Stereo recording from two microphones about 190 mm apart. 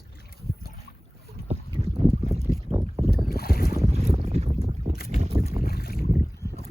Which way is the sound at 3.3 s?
55° left (ahead or behind).